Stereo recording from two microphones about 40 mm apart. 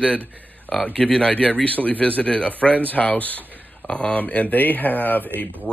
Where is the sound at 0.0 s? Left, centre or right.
Left.